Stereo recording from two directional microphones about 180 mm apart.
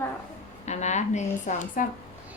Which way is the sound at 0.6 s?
40° left (ahead or behind).